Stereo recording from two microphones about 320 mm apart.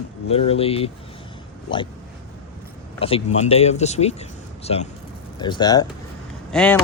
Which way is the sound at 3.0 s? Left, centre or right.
Centre.